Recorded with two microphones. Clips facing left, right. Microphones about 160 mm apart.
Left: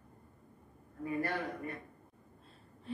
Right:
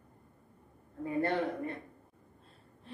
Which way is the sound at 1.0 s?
25° right (ahead or behind).